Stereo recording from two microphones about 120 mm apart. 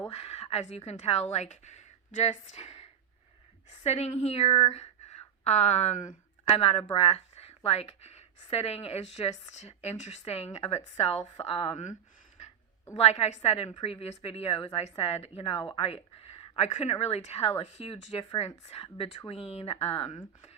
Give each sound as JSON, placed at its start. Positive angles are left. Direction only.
{"t": 0.1, "sound": "speech", "side_deg": 60}
{"t": 3.8, "sound": "speech", "side_deg": 65}
{"t": 4.7, "sound": "a sound", "side_deg": 65}
{"t": 6.6, "sound": "speech", "side_deg": 55}
{"t": 13.0, "sound": "speech", "side_deg": 60}